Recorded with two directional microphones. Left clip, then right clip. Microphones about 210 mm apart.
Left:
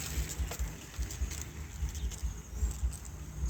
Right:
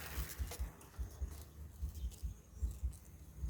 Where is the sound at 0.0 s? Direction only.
30° right (ahead or behind).